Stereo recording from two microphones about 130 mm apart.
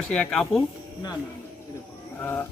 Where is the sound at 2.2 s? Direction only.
15° left (ahead or behind).